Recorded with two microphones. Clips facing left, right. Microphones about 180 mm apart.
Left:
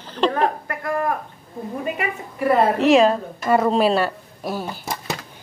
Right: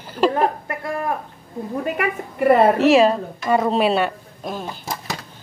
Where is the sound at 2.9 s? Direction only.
Centre (ahead or behind).